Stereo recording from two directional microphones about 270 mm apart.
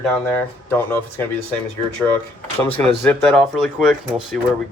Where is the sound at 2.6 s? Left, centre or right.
Centre.